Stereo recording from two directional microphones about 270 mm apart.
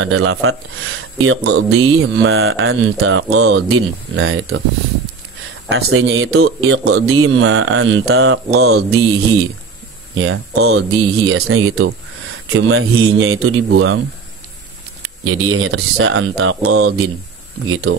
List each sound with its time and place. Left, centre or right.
0.0 s mantra: right
5.7 s mantra: right
10.1 s mantra: right
15.4 s mantra: right